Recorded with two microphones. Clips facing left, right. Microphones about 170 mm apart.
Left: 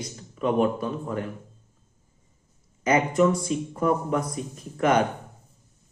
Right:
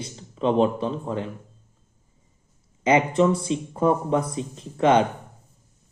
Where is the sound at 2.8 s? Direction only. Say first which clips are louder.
Right 2 dB; 25° right (ahead or behind).